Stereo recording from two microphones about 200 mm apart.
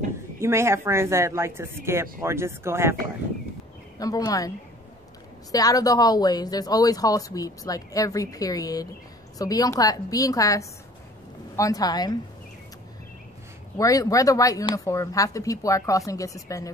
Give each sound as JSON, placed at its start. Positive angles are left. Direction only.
{"t": 0.4, "sound": "speech", "side_deg": -15}
{"t": 4.0, "sound": "speech", "side_deg": 20}
{"t": 5.5, "sound": "a woman's voice", "side_deg": 20}
{"t": 13.7, "sound": "speech", "side_deg": 15}